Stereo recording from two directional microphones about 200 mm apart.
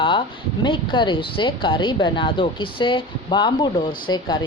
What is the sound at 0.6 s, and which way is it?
Speech, 25° left (ahead or behind).